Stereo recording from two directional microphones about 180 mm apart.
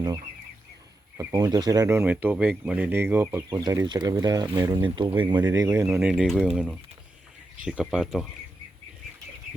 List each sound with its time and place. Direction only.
1.1 s speech: 20° right (ahead or behind)
5.4 s speech: 15° right (ahead or behind)